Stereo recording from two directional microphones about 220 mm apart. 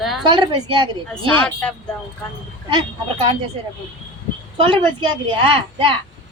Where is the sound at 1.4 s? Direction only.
5° left (ahead or behind).